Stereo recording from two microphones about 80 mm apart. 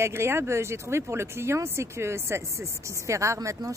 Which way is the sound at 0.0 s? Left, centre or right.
Right.